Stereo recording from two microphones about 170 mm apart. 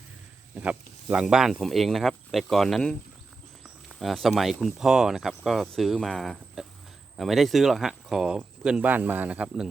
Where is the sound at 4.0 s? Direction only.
Centre (ahead or behind).